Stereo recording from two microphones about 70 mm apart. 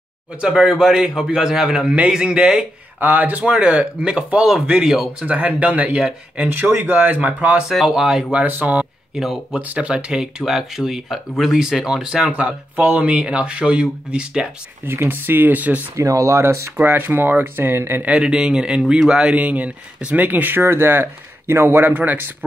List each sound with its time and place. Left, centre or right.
0.4 s speech: centre
3.0 s speech: right; by 5.1 s centre
5.2 s speech: right
7.6 s speech: centre
8.3 s speech: right
9.1 s speech: centre
9.6 s speech: right
12.3 s speech: centre
14.9 s speech: right
16.0 s speech: right
16.7 s speech: right
18.0 s speech: centre